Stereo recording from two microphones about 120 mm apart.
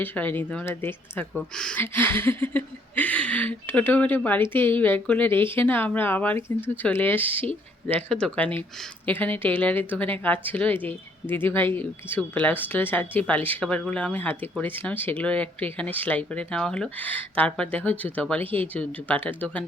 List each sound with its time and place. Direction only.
0.0 s speech: 15° left (ahead or behind)